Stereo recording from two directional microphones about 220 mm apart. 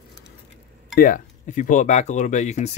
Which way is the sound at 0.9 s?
40° left (ahead or behind).